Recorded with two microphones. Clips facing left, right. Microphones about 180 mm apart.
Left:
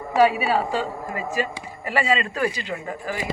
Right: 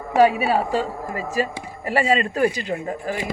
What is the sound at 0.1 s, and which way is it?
Speech, 45° right (ahead or behind).